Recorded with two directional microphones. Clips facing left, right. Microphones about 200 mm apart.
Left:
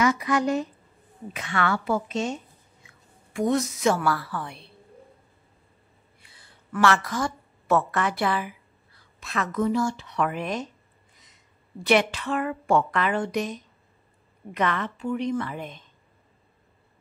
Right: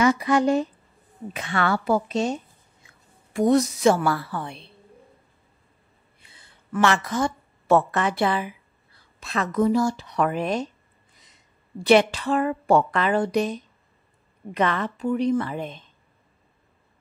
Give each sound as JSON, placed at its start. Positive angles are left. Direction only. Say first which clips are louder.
{"t": 0.0, "sound": "a woman's voice", "louder": "right 3 dB", "side_deg": -30}
{"t": 3.3, "sound": "a woman's voice", "louder": "right 5 dB", "side_deg": -35}
{"t": 6.2, "sound": "a woman's voice", "louder": "right 1 dB", "side_deg": -25}
{"t": 11.8, "sound": "a woman's voice", "louder": "right 4 dB", "side_deg": -30}